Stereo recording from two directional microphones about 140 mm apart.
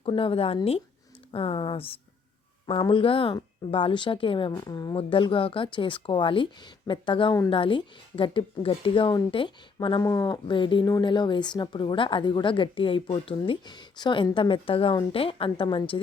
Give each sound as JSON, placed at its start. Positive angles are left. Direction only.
{"t": 0.1, "sound": "speech", "side_deg": 40}
{"t": 4.5, "sound": "speech", "side_deg": 30}
{"t": 4.9, "sound": "speech", "side_deg": 40}